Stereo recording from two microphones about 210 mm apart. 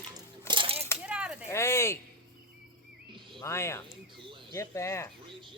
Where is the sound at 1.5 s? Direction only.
10° left (ahead or behind).